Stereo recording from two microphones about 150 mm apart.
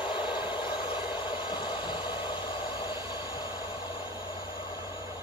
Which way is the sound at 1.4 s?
30° left (ahead or behind).